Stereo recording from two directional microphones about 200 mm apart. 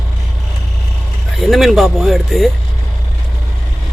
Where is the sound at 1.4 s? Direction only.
Centre (ahead or behind).